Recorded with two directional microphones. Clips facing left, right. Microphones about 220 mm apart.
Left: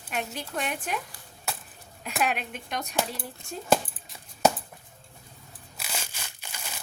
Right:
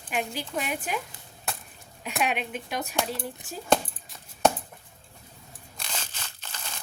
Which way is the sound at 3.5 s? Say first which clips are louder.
Even; centre (ahead or behind).